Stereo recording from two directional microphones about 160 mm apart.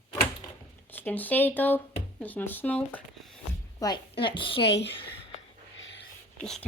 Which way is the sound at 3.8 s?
20° left (ahead or behind).